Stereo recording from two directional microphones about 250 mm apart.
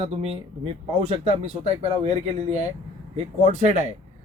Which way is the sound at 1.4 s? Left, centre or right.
Right.